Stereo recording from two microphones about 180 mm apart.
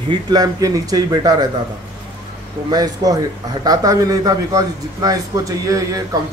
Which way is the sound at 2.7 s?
20° right (ahead or behind).